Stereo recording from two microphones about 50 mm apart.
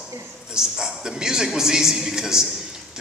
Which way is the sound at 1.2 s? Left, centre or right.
Centre.